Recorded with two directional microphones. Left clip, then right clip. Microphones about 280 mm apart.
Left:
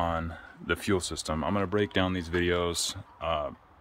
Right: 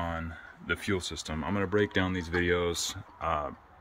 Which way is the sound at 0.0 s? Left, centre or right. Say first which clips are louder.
Left 5 dB; centre.